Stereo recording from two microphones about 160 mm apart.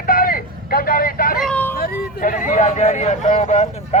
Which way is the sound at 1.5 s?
10° left (ahead or behind).